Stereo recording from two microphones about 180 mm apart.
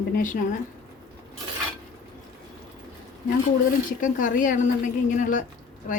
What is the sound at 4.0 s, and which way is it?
Speech, 45° left (ahead or behind).